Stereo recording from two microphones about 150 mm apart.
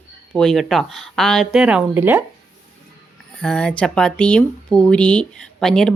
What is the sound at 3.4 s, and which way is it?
Speech, 5° left (ahead or behind).